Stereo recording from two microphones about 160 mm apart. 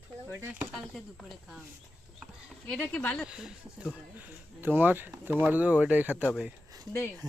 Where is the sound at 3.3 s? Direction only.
5° right (ahead or behind).